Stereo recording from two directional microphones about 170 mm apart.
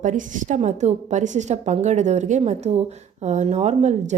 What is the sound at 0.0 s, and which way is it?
A woman's voice, 50° right (ahead or behind).